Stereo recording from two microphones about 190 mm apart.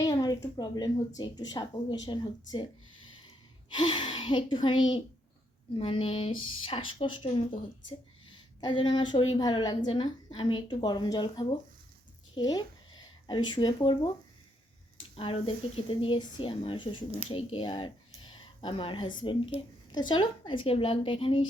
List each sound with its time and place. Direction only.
0.0 s a woman's voice: 20° left (ahead or behind)
3.2 s a sound: 25° left (ahead or behind)
5.7 s a woman's voice: 30° left (ahead or behind)
15.1 s a woman's voice: 30° left (ahead or behind)